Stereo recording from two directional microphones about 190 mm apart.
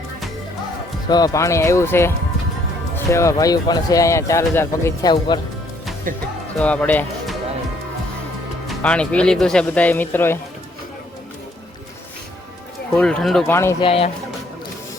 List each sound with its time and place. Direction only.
1.0 s speech: 20° left (ahead or behind)
6.1 s speech: 45° right (ahead or behind)
6.6 s speech: 5° left (ahead or behind)
8.6 s speech: 5° left (ahead or behind)
13.0 s speech: 5° left (ahead or behind)
13.5 s speech: 15° left (ahead or behind)
13.8 s speech: 30° left (ahead or behind)